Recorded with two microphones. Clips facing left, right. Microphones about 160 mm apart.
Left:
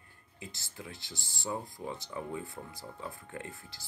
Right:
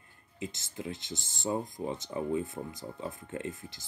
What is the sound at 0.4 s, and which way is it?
Speech, 20° right (ahead or behind).